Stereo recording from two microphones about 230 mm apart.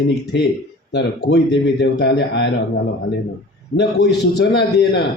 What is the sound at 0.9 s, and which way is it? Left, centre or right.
A man's voice, left.